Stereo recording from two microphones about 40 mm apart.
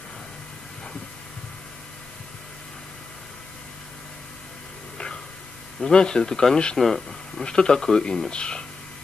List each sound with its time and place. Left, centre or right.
4.9 s a sound: left
5.9 s speech: centre
6.8 s speech: centre
7.4 s speech: centre